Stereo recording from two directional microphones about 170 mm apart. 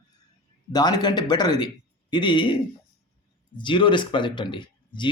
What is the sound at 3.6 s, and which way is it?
A man's voice, 30° left (ahead or behind).